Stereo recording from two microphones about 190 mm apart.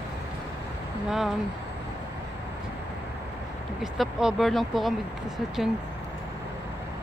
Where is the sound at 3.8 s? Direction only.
5° right (ahead or behind).